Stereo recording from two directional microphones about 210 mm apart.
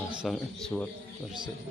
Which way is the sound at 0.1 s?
Centre (ahead or behind).